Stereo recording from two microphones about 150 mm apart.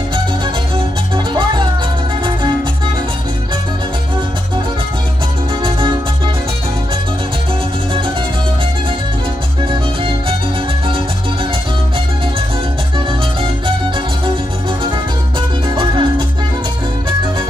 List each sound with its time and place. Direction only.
1.1 s music: 30° right (ahead or behind)
5.6 s music: 35° right (ahead or behind)
15.7 s music: 35° right (ahead or behind)